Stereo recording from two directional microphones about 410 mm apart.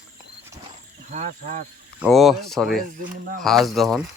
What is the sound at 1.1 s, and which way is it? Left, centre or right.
Speech, centre.